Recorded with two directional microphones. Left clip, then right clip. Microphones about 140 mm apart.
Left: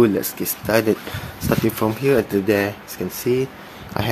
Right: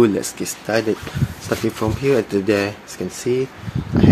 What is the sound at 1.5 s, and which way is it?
Speech, 20° left (ahead or behind).